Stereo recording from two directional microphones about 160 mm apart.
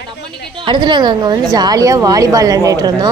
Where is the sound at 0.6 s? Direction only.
30° right (ahead or behind).